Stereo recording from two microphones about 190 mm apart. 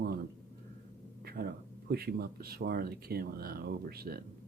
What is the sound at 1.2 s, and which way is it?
Speech, 55° right (ahead or behind).